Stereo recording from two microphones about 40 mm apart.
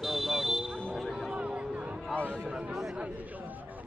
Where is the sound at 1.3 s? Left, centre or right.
Right.